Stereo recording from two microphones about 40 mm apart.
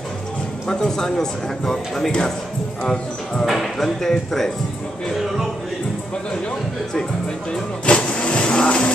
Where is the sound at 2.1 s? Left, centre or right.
Centre.